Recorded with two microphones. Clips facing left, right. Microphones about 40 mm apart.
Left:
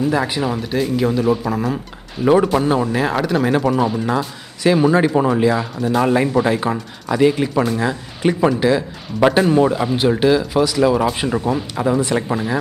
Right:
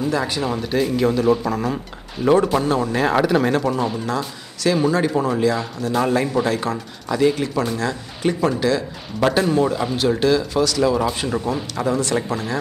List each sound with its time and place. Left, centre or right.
0.1 s speech: centre
0.5 s speech: centre
2.9 s speech: centre
3.5 s speech: centre
4.6 s speech: left